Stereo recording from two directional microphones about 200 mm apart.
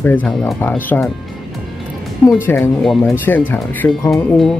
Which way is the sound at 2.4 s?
10° left (ahead or behind).